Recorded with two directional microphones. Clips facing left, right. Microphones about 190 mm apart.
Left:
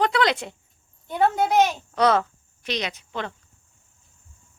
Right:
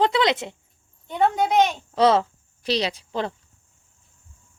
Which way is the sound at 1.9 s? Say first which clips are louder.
Right 2 dB; 25° right (ahead or behind).